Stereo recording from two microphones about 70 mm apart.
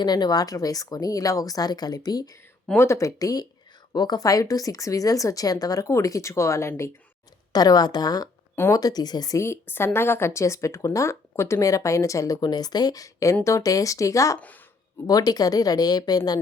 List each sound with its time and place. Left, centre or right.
0.0 s a woman's voice: left
2.7 s speech: left
3.2 s a woman's voice: left
3.9 s a woman's voice: left
7.5 s a woman's voice: left
9.4 s speech: left
12.4 s speech: left
15.0 s speech: left